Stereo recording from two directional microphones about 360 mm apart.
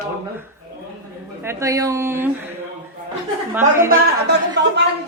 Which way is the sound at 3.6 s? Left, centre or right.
Centre.